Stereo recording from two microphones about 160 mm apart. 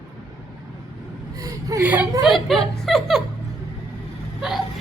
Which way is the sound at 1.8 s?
10° right (ahead or behind).